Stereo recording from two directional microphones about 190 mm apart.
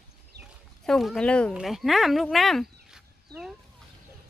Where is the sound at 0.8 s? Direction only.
Centre (ahead or behind).